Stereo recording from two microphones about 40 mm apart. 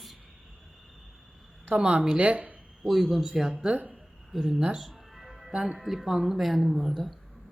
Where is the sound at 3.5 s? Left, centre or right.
Right.